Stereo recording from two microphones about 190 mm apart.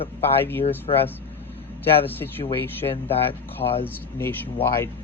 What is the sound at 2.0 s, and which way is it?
Speech, 10° left (ahead or behind).